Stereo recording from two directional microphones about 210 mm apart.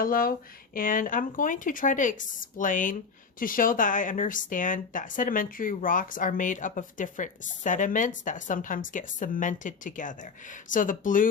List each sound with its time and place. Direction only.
0.0 s speech: 45° left (ahead or behind)